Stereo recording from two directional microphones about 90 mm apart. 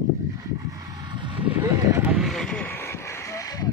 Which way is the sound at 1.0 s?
60° right (ahead or behind).